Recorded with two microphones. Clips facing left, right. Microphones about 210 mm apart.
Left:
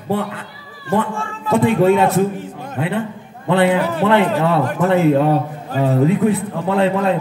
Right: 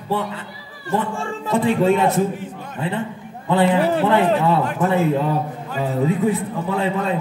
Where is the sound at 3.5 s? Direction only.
70° left (ahead or behind).